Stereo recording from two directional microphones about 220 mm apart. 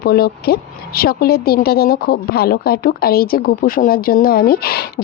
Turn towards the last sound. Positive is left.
turn(degrees=45)  # may be behind; listen again after turning